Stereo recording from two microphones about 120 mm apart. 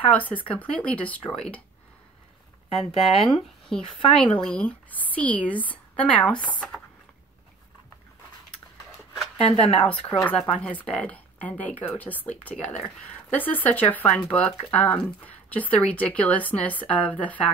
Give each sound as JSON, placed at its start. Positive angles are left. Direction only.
{"t": 0.0, "sound": "speech", "side_deg": 10}
{"t": 2.9, "sound": "speech", "side_deg": 60}
{"t": 3.3, "sound": "speech", "side_deg": 0}
{"t": 9.4, "sound": "speech", "side_deg": 55}
{"t": 9.8, "sound": "speech", "side_deg": 10}